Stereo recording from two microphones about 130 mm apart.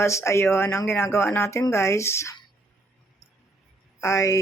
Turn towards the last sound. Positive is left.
turn(degrees=25)  # may be behind; listen again after turning